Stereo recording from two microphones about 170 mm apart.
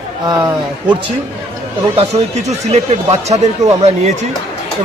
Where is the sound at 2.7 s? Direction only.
40° right (ahead or behind).